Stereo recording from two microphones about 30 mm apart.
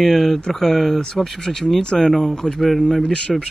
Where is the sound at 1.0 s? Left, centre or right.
Left.